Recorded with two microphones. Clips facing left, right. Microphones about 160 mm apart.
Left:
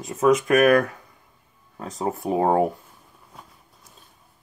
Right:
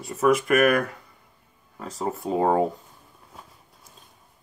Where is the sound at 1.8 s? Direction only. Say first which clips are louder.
Left 2 dB; 20° left (ahead or behind).